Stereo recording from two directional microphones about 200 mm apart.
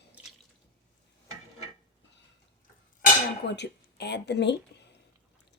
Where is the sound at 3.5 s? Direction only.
55° left (ahead or behind).